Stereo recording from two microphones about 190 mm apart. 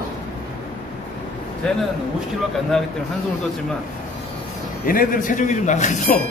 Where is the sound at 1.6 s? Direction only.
5° left (ahead or behind).